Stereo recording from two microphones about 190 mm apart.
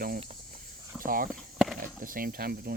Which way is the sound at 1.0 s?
50° right (ahead or behind).